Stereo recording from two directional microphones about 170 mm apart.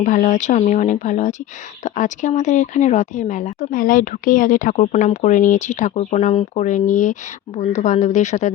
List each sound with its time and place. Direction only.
0.0 s speech: 50° left (ahead or behind)